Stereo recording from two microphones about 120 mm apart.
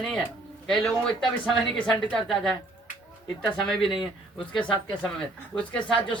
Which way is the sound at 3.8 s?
45° left (ahead or behind).